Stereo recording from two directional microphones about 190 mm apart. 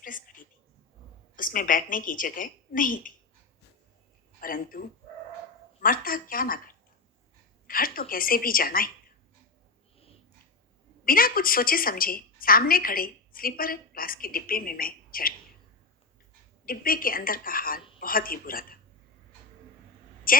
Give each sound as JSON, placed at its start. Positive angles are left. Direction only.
{"t": 0.0, "sound": "a sound", "side_deg": 45}
{"t": 1.4, "sound": "a woman's voice", "side_deg": 45}
{"t": 4.4, "sound": "a man's voice", "side_deg": 50}
{"t": 11.0, "sound": "a woman's voice", "side_deg": 50}
{"t": 16.6, "sound": "a woman's voice", "side_deg": 50}
{"t": 20.3, "sound": "a woman's voice", "side_deg": 50}